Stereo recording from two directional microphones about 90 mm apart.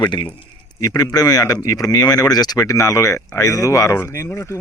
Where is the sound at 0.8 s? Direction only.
45° left (ahead or behind).